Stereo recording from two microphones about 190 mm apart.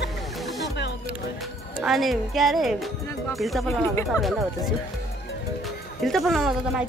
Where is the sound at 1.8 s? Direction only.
Centre (ahead or behind).